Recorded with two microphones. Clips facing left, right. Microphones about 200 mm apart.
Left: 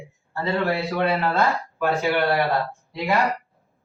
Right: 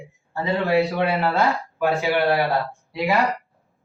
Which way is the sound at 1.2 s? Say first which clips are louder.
Right 1 dB; centre (ahead or behind).